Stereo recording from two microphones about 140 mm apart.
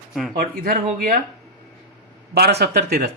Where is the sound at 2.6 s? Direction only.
90° right.